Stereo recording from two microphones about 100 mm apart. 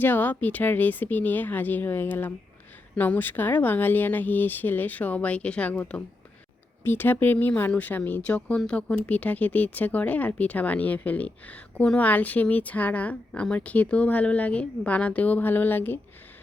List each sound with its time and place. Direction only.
0.0 s speech: 20° left (ahead or behind)